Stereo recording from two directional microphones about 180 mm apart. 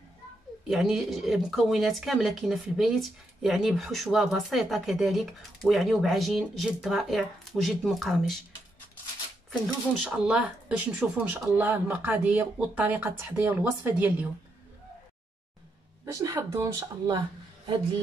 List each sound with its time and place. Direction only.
0.7 s speech: centre (ahead or behind)
10.0 s speech: 5° right (ahead or behind)
16.1 s speech: 15° right (ahead or behind)